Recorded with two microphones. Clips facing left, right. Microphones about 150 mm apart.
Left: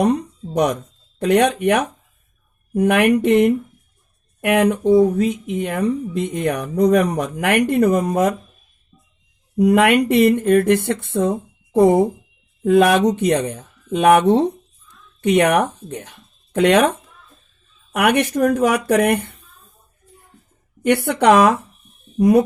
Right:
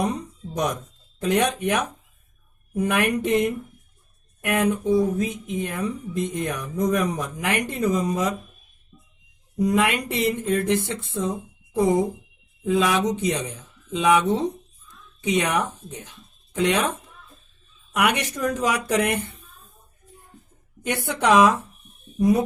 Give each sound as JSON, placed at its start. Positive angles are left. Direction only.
{"t": 0.0, "sound": "speech", "side_deg": 65}
{"t": 9.6, "sound": "speech", "side_deg": 65}
{"t": 17.9, "sound": "speech", "side_deg": 55}
{"t": 20.8, "sound": "speech", "side_deg": 65}